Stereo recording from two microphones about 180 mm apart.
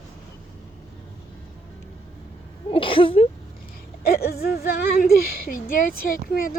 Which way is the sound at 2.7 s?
30° left (ahead or behind).